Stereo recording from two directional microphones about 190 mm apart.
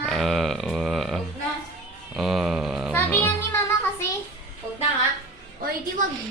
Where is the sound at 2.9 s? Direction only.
10° left (ahead or behind).